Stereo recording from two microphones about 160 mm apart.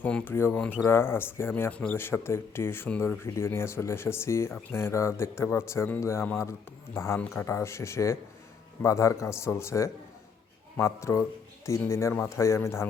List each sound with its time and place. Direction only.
0.0 s speech: 10° left (ahead or behind)